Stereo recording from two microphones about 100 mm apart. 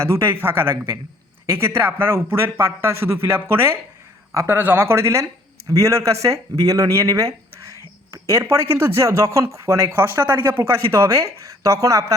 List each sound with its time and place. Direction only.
0.0 s speech: 25° right (ahead or behind)